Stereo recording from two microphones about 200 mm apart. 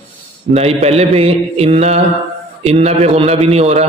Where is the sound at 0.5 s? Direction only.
30° right (ahead or behind).